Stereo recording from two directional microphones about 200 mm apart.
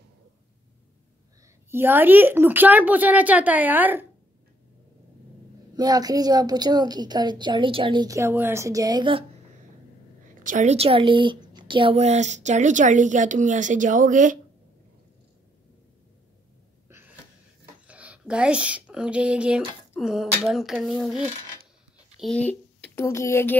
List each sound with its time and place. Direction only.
1.7 s speech: 10° right (ahead or behind)
5.8 s a woman's voice: 20° right (ahead or behind)
10.4 s a woman's voice: 40° right (ahead or behind)
17.8 s speech: 5° right (ahead or behind)
22.2 s speech: 5° left (ahead or behind)